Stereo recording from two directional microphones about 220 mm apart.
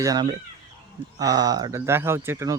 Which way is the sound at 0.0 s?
15° right (ahead or behind).